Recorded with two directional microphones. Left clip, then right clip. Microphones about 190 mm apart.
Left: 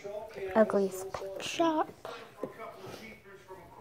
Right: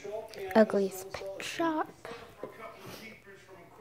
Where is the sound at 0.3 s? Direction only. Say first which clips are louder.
Right 2 dB; 25° right (ahead or behind).